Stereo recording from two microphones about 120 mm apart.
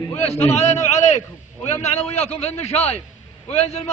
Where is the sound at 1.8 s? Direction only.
60° left (ahead or behind).